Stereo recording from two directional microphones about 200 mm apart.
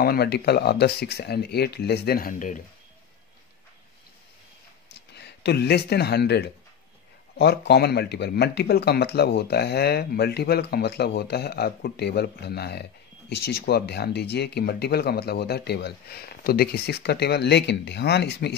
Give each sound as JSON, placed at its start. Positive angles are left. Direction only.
{"t": 0.0, "sound": "speech", "side_deg": 50}
{"t": 5.1, "sound": "speech", "side_deg": 55}